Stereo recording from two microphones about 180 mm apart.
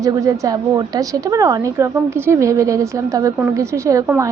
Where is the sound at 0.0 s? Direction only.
20° right (ahead or behind).